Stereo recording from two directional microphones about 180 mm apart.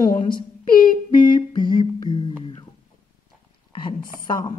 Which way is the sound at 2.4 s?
30° left (ahead or behind).